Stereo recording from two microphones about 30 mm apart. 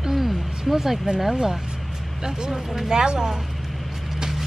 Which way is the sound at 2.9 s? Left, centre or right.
Right.